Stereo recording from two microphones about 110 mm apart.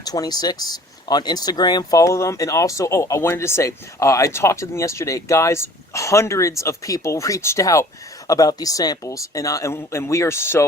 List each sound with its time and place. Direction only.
0.0 s speech: 35° left (ahead or behind)